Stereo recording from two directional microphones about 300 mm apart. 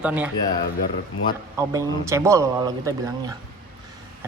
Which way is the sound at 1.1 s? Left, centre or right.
Left.